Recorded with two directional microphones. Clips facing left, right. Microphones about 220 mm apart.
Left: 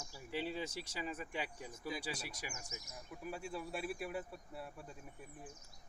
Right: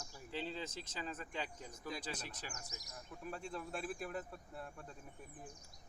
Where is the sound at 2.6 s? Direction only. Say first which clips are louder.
Left 3 dB; 35° right (ahead or behind).